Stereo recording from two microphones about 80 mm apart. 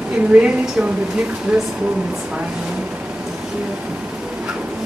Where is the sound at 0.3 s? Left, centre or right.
Centre.